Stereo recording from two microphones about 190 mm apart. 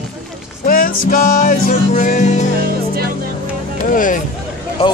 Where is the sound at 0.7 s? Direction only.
50° left (ahead or behind).